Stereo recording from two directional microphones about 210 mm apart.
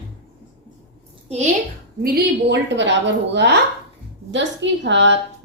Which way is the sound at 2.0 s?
50° right (ahead or behind).